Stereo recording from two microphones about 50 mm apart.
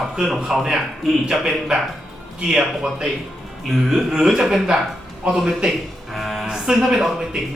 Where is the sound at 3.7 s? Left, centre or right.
Centre.